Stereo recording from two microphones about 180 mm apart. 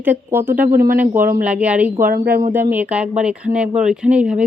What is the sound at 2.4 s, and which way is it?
A woman's voice, 10° right (ahead or behind).